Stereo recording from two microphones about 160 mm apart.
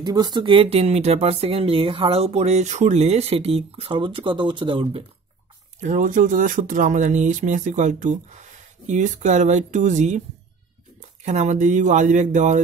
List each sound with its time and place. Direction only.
0.0 s speech: 25° right (ahead or behind)
5.8 s speech: 50° right (ahead or behind)